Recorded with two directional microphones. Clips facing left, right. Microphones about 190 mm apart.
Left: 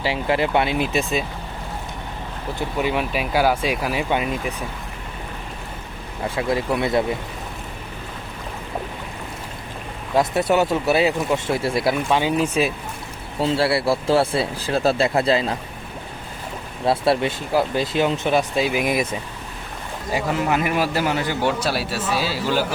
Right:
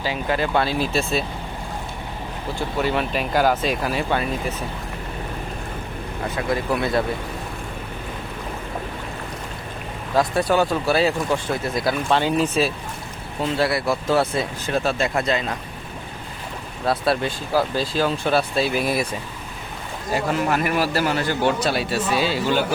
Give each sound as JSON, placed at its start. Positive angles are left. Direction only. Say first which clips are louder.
{"t": 0.0, "sound": "speech", "louder": "left 2 dB", "side_deg": 25}
{"t": 2.7, "sound": "speech", "louder": "even", "side_deg": 10}
{"t": 6.2, "sound": "speech", "louder": "left 2 dB", "side_deg": 25}
{"t": 10.2, "sound": "speech", "louder": "left 1 dB", "side_deg": 25}
{"t": 12.0, "sound": "speech", "louder": "even", "side_deg": 10}
{"t": 13.4, "sound": "speech", "louder": "left 2 dB", "side_deg": 30}
{"t": 16.8, "sound": "speech", "louder": "left 2 dB", "side_deg": 25}
{"t": 20.1, "sound": "a man's voice", "louder": "even", "side_deg": 15}